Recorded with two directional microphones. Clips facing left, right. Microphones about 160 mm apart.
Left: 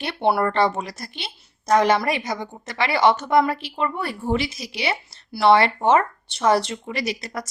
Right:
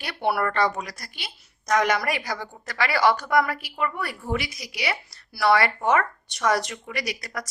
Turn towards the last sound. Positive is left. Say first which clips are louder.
# left 4 dB
turn(degrees=25)  # may be behind; listen again after turning